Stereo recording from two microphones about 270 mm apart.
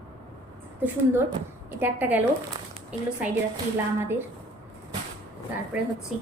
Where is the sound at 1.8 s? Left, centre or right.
Centre.